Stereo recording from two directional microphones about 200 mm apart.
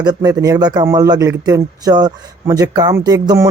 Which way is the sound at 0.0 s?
20° right (ahead or behind).